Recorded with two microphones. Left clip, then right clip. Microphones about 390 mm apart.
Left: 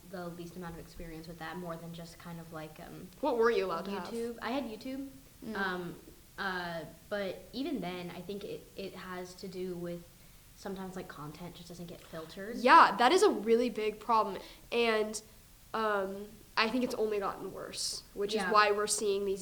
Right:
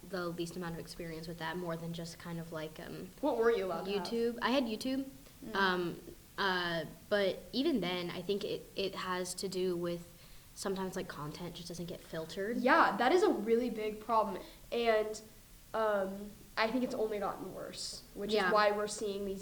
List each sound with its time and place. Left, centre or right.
0.1 s speech: right
3.2 s a woman's voice: left
4.2 s speech: right
12.6 s a woman's voice: left